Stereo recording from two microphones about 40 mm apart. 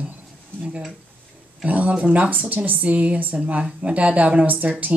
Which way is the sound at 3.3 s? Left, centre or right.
Right.